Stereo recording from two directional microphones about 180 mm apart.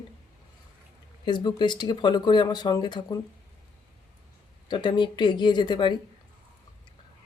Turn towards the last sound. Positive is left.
turn(degrees=25)  # may be behind; listen again after turning